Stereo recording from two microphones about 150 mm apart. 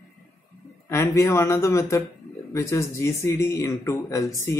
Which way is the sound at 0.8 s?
20° left (ahead or behind).